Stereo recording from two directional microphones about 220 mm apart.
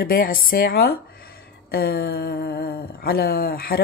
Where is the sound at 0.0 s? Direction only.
40° left (ahead or behind).